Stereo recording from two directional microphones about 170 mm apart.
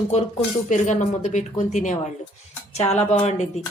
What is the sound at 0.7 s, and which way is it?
A woman's voice, 45° left (ahead or behind).